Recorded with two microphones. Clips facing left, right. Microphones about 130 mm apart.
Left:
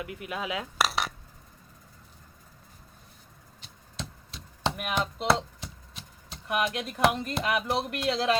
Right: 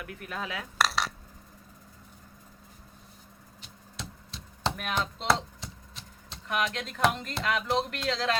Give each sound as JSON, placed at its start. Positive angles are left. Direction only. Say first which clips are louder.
{"t": 0.0, "sound": "speech", "louder": "left 3 dB", "side_deg": 15}
{"t": 0.8, "sound": "dishes", "louder": "right 1 dB", "side_deg": 5}
{"t": 4.8, "sound": "a sound", "louder": "left 2 dB", "side_deg": 10}
{"t": 6.5, "sound": "speech", "louder": "left 2 dB", "side_deg": 15}